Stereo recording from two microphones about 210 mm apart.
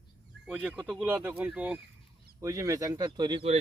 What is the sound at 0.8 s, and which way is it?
Speech, 5° right (ahead or behind).